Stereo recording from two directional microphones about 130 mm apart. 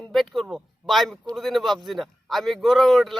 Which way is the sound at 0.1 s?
Centre (ahead or behind).